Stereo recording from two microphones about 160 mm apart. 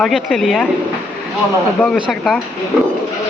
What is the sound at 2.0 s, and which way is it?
Speech, centre (ahead or behind).